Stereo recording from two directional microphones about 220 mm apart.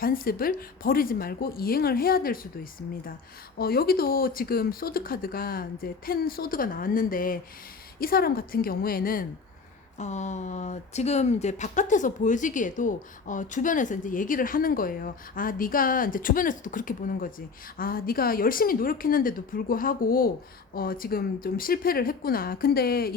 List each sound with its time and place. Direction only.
0.0 s speech: 40° left (ahead or behind)
3.6 s speech: 45° left (ahead or behind)